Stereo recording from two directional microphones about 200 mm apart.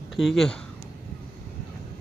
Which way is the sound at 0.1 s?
Centre (ahead or behind).